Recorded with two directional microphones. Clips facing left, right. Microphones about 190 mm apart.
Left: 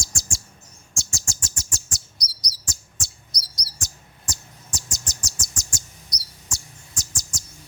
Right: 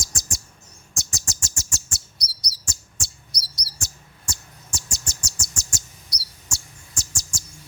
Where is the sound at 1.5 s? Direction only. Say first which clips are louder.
Even; 25° right (ahead or behind).